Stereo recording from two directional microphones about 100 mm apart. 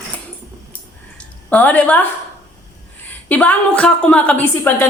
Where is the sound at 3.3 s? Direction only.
15° left (ahead or behind).